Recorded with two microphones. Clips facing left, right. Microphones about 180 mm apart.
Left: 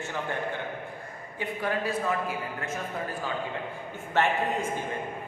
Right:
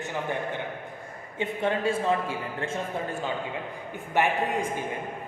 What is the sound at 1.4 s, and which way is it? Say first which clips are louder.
A man's voice: right 3 dB; 25° right (ahead or behind).